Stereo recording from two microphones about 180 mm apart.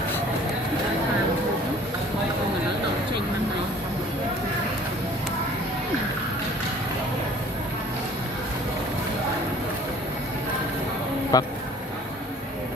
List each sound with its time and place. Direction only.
11.3 s speech: 20° left (ahead or behind)